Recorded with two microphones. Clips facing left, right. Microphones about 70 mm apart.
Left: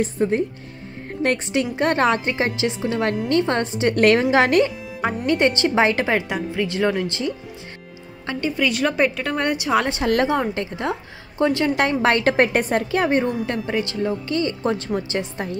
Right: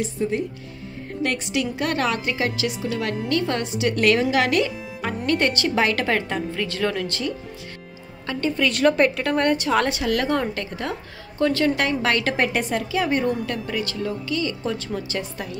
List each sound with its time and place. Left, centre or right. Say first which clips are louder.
0.0 s a woman's voice: left 4 dB; left
5.0 s a woman's voice: left 3 dB; left
8.3 s a woman's voice: left 1 dB; centre
9.8 s a woman's voice: left 3 dB; left
10.2 s a woman's voice: left 2 dB; centre; by 13.1 s left
13.1 s a woman's voice: left 2 dB; left
14.9 s a woman's voice: left 4 dB; left